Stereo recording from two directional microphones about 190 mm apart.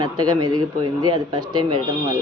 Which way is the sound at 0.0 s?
20° right (ahead or behind).